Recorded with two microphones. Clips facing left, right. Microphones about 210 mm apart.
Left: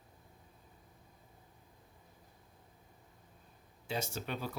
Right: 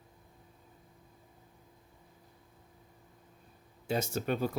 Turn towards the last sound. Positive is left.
turn(degrees=-50)  # may be behind; listen again after turning